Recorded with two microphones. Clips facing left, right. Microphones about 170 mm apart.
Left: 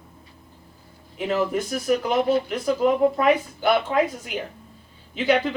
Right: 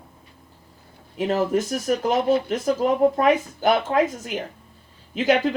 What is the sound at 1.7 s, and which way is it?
Speech, 45° right (ahead or behind).